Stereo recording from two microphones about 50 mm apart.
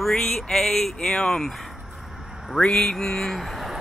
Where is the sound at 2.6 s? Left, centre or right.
Centre.